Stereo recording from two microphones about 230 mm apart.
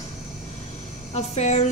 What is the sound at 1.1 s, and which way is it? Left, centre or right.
Speech, left.